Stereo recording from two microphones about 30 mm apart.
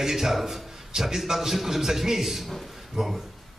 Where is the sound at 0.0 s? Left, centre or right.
Centre.